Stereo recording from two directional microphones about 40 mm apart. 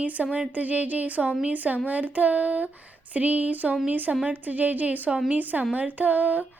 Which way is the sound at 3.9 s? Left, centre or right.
Right.